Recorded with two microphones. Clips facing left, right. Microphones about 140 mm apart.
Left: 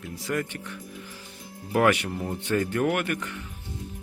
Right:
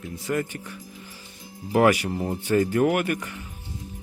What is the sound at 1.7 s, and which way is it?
Speech, 10° right (ahead or behind).